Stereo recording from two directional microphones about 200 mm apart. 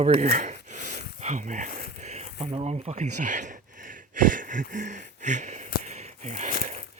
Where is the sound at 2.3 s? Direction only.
25° right (ahead or behind).